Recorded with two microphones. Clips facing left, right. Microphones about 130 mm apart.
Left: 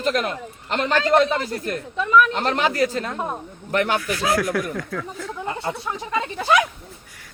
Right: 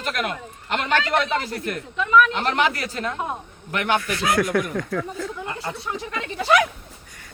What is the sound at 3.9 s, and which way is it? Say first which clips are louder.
Speech: even; centre (ahead or behind).